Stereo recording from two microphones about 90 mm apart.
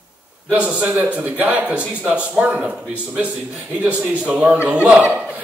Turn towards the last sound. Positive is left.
turn(degrees=-15)  # may be behind; listen again after turning